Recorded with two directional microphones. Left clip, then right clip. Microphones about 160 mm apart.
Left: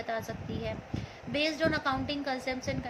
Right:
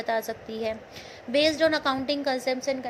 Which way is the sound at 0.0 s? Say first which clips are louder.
Right 7 dB; 50° right (ahead or behind).